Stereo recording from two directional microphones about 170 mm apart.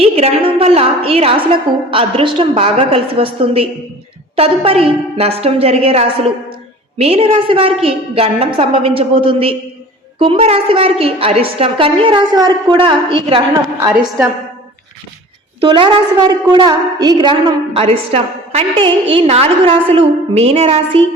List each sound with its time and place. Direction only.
0.0 s a woman's voice: 35° right (ahead or behind)
15.6 s a woman's voice: 30° right (ahead or behind)
17.7 s a woman's voice: 35° right (ahead or behind)